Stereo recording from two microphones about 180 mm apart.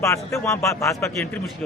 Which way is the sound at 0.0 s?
15° left (ahead or behind).